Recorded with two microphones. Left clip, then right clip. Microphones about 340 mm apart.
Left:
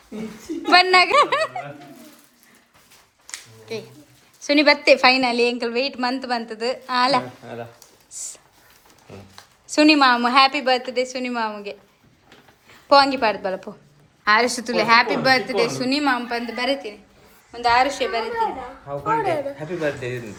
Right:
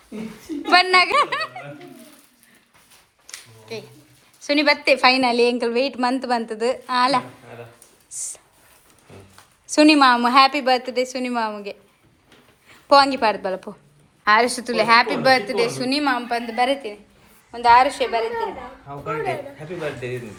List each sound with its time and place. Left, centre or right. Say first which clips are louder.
0.7 s a woman's voice: left 1 dB; centre
4.4 s a woman's voice: left 2 dB; centre
8.1 s a sound: right 2 dB; centre
9.6 s a woman's voice: right 1 dB; centre
19.0 s a man's voice: left 4 dB; left